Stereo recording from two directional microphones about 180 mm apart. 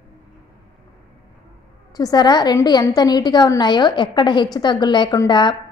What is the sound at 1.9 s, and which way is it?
A woman's voice, 20° left (ahead or behind).